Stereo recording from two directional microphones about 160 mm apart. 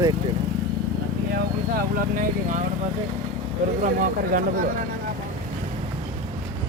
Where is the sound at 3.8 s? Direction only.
60° right (ahead or behind).